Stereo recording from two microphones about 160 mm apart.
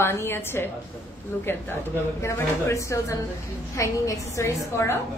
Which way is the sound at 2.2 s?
20° left (ahead or behind).